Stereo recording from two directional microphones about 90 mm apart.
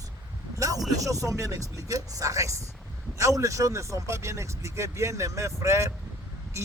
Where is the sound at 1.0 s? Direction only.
35° right (ahead or behind).